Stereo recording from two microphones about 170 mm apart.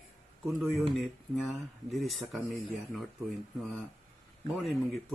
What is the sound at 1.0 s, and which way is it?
Speech, centre (ahead or behind).